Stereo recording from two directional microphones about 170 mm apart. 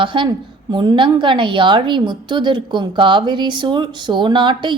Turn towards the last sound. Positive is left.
turn(degrees=-30)  # may be behind; listen again after turning